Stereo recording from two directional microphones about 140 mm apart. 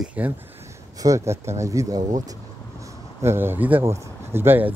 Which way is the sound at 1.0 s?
20° right (ahead or behind).